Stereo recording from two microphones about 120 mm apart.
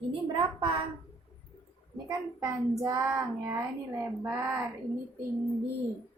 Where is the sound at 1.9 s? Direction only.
30° right (ahead or behind).